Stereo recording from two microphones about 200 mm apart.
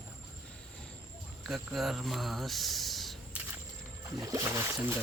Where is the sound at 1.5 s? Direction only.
Centre (ahead or behind).